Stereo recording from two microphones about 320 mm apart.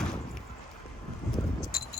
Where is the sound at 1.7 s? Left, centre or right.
Left.